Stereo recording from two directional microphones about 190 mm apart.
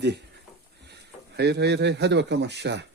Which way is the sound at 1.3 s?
60° right (ahead or behind).